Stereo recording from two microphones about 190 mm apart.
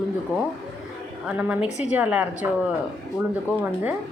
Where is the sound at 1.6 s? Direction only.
35° left (ahead or behind).